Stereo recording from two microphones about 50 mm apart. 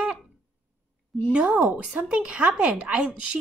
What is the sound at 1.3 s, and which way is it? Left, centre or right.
Speech, right.